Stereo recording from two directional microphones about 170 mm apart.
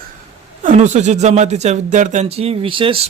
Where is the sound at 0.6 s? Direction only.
45° right (ahead or behind).